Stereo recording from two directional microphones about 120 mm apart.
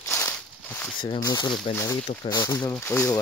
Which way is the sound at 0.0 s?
20° left (ahead or behind).